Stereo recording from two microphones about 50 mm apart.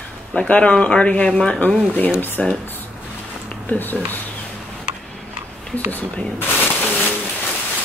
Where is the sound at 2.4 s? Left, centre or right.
Centre.